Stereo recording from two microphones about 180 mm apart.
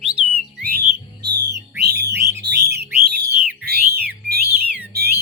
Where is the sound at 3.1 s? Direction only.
60° right (ahead or behind).